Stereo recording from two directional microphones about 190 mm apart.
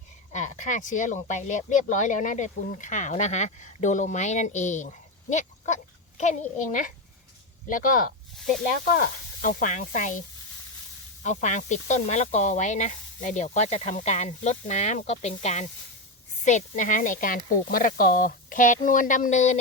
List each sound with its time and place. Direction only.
0.3 s speech: 40° left (ahead or behind)